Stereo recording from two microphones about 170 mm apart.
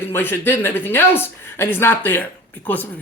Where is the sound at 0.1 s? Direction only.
15° left (ahead or behind).